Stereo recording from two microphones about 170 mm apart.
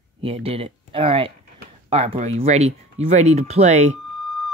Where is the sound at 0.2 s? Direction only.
35° right (ahead or behind).